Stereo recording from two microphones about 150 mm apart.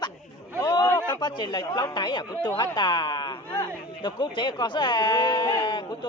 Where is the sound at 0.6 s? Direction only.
30° left (ahead or behind).